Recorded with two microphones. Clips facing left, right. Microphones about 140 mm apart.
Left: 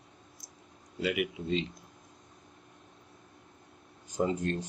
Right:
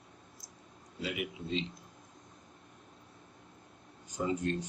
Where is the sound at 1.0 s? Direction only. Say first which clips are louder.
Left 6 dB; 70° left (ahead or behind).